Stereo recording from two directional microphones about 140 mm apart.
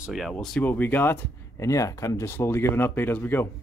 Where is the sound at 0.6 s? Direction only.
15° left (ahead or behind).